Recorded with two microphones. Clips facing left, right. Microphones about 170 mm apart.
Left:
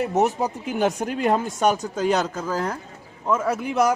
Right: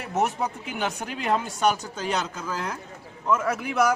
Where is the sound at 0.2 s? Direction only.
40° left (ahead or behind).